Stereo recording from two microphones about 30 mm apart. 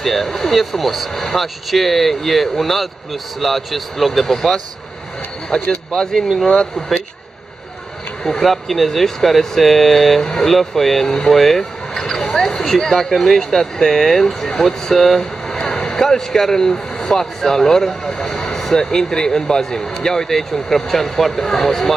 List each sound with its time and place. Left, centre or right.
0.0 s speech: centre
5.5 s speech: left
8.5 s speech: centre
10.2 s speech: left
10.5 s speech: centre
14.2 s speech: centre
14.6 s speech: centre
15.1 s speech: left